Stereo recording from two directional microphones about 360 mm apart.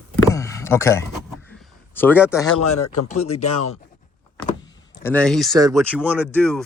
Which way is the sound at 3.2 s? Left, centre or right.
Centre.